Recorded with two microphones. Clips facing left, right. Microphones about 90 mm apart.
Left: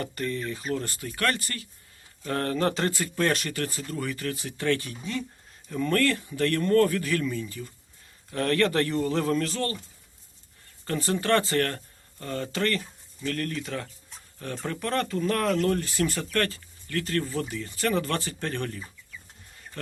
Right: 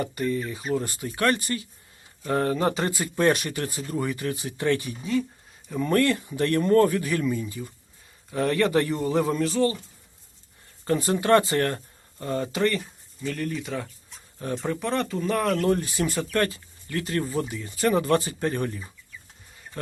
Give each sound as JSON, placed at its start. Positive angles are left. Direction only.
{"t": 0.0, "sound": "speech", "side_deg": -10}
{"t": 10.8, "sound": "speech", "side_deg": -20}
{"t": 14.3, "sound": "speech", "side_deg": -20}
{"t": 14.7, "sound": "speech", "side_deg": -5}
{"t": 15.6, "sound": "speech", "side_deg": -15}